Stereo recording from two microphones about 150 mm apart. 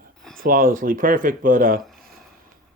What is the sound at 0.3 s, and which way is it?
Speech, 70° right (ahead or behind).